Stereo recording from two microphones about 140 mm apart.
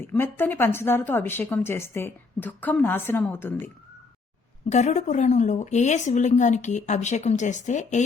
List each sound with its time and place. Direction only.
0.2 s a woman's voice: 15° left (ahead or behind)
4.7 s a woman's voice: 55° left (ahead or behind)